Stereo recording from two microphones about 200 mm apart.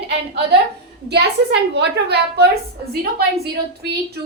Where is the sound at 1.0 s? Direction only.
55° right (ahead or behind).